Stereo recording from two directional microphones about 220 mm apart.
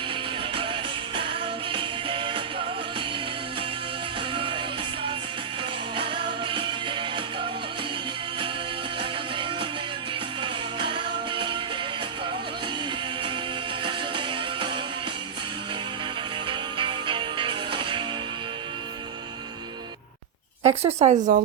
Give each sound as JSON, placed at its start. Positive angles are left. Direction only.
{"t": 0.5, "sound": "music", "side_deg": -25}
{"t": 4.4, "sound": "music", "side_deg": -25}
{"t": 6.0, "sound": "music", "side_deg": -20}
{"t": 9.0, "sound": "music", "side_deg": -25}
{"t": 13.8, "sound": "music", "side_deg": -20}
{"t": 16.5, "sound": "music", "side_deg": -20}
{"t": 20.7, "sound": "speech", "side_deg": -30}